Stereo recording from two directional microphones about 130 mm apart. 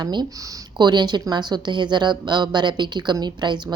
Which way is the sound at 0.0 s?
35° right (ahead or behind).